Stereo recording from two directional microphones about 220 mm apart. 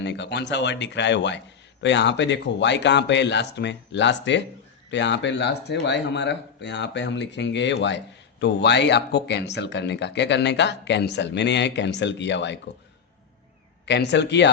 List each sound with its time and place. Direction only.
0.0 s speech: 50° left (ahead or behind)
13.8 s speech: 50° left (ahead or behind)